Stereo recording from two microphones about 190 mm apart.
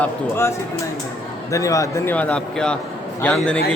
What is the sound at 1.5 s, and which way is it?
A man's voice, 15° left (ahead or behind).